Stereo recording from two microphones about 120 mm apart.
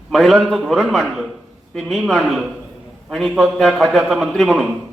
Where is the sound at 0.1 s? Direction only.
Centre (ahead or behind).